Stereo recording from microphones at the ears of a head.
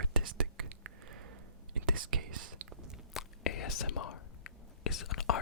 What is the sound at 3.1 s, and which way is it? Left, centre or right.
Whispering, left.